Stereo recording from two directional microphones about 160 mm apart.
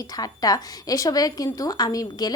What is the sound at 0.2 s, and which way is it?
A woman's voice, 25° left (ahead or behind).